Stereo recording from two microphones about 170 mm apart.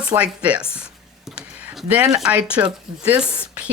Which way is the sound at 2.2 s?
5° right (ahead or behind).